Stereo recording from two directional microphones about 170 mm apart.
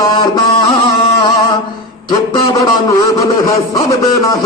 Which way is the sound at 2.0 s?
25° left (ahead or behind).